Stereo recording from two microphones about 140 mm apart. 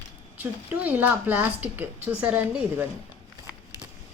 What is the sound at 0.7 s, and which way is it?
A woman's voice, 10° right (ahead or behind).